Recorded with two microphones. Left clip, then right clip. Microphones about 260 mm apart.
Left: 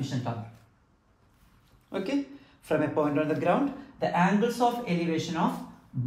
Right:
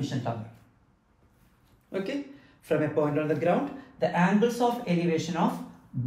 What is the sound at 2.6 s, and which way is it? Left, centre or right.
Speech, centre.